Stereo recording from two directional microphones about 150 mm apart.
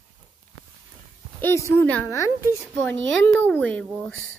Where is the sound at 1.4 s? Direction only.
20° left (ahead or behind).